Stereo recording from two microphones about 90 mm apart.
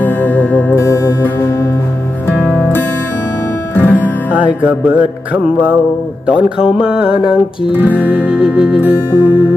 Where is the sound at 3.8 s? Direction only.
20° left (ahead or behind).